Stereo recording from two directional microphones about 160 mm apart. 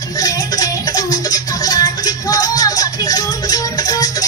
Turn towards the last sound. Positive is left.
turn(degrees=25)  # may be behind; listen again after turning